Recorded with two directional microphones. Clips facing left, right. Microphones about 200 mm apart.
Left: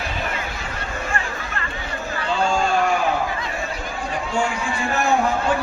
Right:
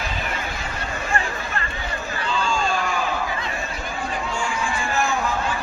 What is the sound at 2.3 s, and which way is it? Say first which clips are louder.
Hubbub: left 4 dB; 60° left (ahead or behind).